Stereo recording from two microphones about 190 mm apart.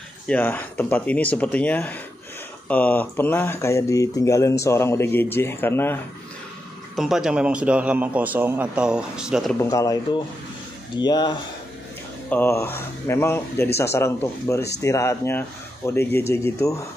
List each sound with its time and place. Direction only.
0.3 s speech: 10° left (ahead or behind)
7.0 s a man's voice: centre (ahead or behind)
9.6 s speech: 15° left (ahead or behind)
12.3 s speech: 10° left (ahead or behind)